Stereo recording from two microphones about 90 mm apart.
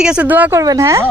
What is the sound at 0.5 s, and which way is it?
Speech, 40° right (ahead or behind).